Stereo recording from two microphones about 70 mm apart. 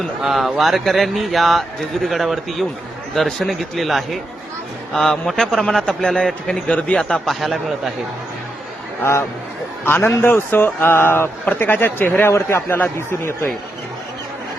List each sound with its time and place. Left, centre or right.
0.2 s a man's voice: centre
7.3 s speech: centre
9.8 s speech: left
12.3 s speech: left